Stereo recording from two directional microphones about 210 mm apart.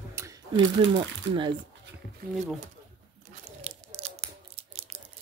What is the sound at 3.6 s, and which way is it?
Crunch, 30° right (ahead or behind).